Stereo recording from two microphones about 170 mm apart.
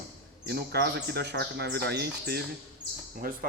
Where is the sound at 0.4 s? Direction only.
70° right (ahead or behind).